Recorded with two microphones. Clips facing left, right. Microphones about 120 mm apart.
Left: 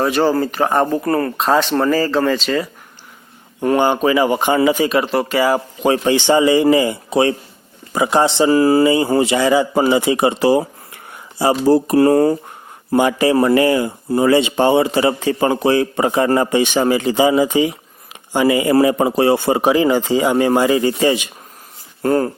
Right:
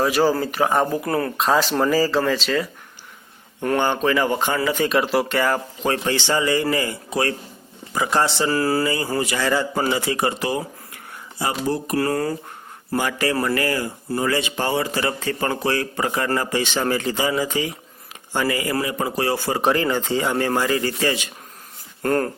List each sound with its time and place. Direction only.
0.0 s speech: 5° right (ahead or behind)
3.6 s speech: 10° left (ahead or behind)
4.8 s a man's voice: centre (ahead or behind); by 10.3 s 20° left (ahead or behind)
10.4 s a man's voice: 30° left (ahead or behind); by 22.3 s 10° left (ahead or behind)